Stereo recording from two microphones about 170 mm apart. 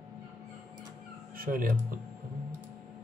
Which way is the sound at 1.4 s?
55° right (ahead or behind).